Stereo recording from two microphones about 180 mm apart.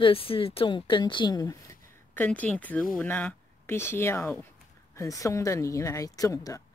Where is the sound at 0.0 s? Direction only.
30° left (ahead or behind).